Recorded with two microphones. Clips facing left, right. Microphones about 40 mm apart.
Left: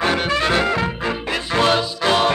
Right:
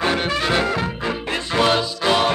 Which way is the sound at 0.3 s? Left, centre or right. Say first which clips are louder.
Left 2 dB; left.